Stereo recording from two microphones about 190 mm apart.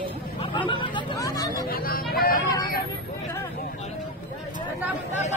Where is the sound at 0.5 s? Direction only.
25° left (ahead or behind).